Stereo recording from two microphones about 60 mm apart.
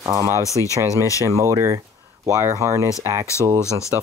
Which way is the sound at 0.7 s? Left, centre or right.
Right.